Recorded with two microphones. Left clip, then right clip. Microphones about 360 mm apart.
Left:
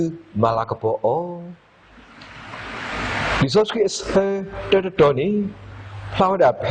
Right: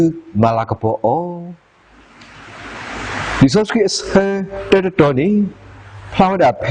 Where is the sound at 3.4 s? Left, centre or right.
Right.